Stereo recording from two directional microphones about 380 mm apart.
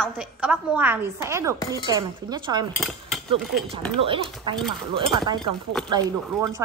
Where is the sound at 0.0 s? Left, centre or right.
Centre.